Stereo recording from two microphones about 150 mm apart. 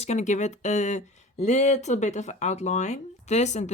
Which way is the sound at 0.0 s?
50° left (ahead or behind).